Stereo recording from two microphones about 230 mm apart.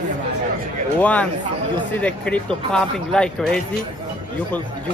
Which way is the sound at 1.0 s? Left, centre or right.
Centre.